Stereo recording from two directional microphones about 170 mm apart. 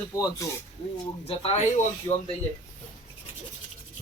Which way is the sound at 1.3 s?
35° left (ahead or behind).